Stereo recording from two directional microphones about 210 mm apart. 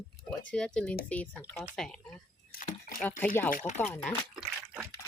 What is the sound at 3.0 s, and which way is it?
Speech, 10° left (ahead or behind).